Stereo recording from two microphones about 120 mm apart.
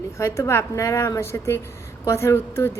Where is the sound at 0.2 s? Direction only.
25° left (ahead or behind).